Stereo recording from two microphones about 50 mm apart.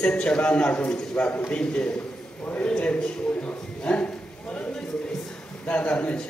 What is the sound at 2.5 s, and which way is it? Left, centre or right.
A man's voice, left.